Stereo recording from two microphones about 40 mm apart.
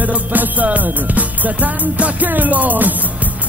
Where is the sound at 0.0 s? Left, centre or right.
Right.